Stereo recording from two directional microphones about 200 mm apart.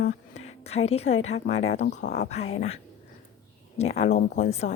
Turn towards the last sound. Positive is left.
turn(degrees=35)  # may be behind; listen again after turning